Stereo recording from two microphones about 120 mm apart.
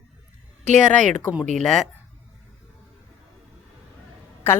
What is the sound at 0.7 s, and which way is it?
Speech, 90° right.